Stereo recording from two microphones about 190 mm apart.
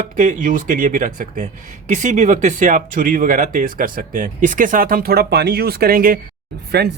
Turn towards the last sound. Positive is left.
turn(degrees=-60)  # may be behind; listen again after turning